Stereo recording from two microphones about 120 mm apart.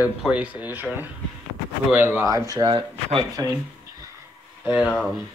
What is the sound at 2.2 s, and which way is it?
Speech, 30° right (ahead or behind).